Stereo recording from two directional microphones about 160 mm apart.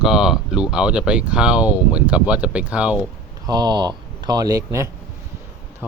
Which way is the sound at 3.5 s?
25° right (ahead or behind).